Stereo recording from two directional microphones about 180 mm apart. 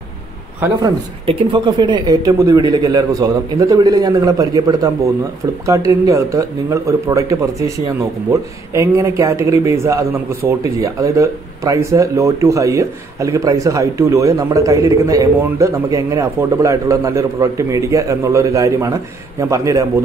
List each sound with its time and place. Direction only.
1.2 s speech: 25° right (ahead or behind)